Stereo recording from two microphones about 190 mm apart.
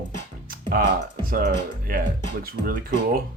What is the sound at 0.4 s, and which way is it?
Music, 50° right (ahead or behind).